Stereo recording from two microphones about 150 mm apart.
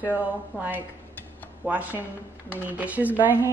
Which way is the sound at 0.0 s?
10° right (ahead or behind).